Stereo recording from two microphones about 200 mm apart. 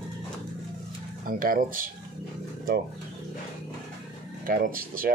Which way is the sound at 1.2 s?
45° right (ahead or behind).